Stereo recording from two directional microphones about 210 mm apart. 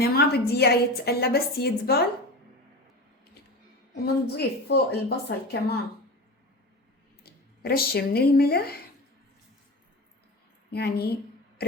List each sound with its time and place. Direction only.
0.0 s a woman's voice: 50° left (ahead or behind)
4.0 s a woman's voice: 50° left (ahead or behind)
7.3 s speech: 50° left (ahead or behind)
10.7 s a sound: 50° left (ahead or behind)